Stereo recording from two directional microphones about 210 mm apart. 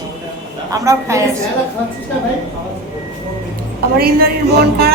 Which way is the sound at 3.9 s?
45° right (ahead or behind).